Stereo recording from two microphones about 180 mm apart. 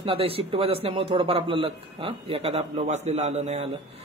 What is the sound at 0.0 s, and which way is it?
A man's voice, 30° right (ahead or behind).